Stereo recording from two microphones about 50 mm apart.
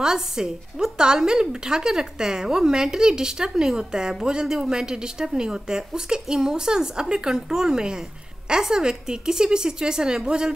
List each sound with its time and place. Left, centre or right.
0.0 s a woman's voice: centre